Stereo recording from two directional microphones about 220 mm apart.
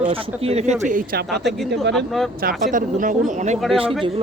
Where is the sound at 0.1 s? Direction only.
30° right (ahead or behind).